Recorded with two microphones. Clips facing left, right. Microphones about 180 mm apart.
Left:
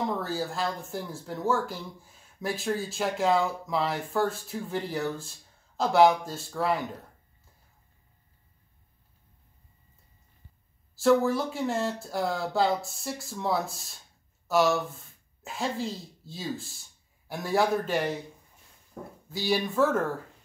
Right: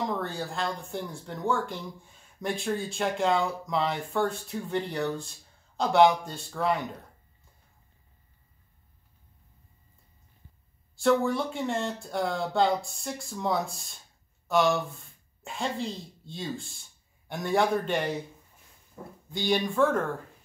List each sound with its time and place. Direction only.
0.0 s speech: centre (ahead or behind)
11.0 s speech: centre (ahead or behind)
19.0 s speech: 90° left
19.3 s speech: 5° left (ahead or behind)